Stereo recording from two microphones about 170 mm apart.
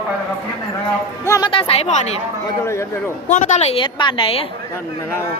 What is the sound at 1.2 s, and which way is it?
Speech, 20° left (ahead or behind).